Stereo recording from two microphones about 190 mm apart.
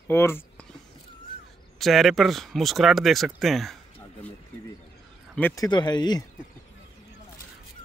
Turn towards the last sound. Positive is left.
turn(degrees=20)  # may be behind; listen again after turning